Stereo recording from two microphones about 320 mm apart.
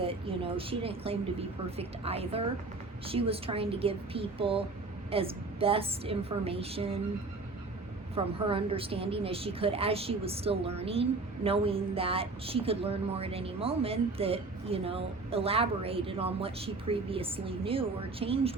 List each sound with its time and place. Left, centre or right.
0.0 s a woman's voice: centre
8.1 s a woman's voice: centre